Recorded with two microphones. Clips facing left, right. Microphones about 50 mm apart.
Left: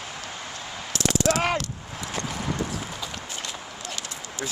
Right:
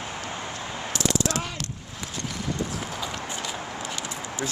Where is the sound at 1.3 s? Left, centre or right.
Left.